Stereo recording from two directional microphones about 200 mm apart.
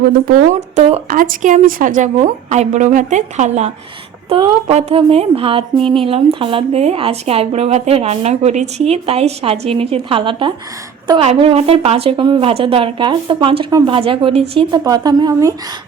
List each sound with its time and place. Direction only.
0.8 s speech: 30° right (ahead or behind)
1.1 s a woman's voice: 40° right (ahead or behind)
5.8 s speech: 5° left (ahead or behind)
6.1 s a woman's voice: 25° right (ahead or behind)